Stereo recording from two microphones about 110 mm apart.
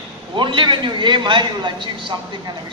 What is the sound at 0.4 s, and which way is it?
A man's voice, 45° right (ahead or behind).